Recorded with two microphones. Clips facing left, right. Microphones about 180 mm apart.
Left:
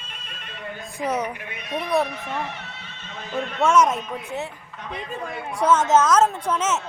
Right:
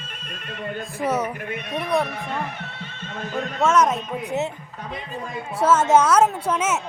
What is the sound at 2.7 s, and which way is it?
Neigh, 55° right (ahead or behind).